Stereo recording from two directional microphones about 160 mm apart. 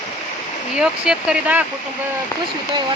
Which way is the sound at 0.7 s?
5° right (ahead or behind).